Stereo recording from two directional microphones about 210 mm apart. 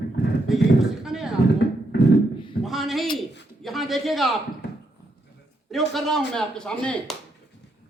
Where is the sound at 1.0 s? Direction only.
Centre (ahead or behind).